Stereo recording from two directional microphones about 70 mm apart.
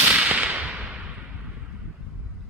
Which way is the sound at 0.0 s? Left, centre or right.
Right.